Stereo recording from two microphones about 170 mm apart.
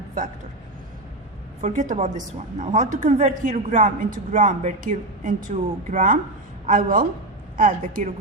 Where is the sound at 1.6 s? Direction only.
45° right (ahead or behind).